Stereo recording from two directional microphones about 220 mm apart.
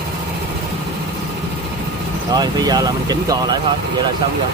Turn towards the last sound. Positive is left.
turn(degrees=-15)  # may be behind; listen again after turning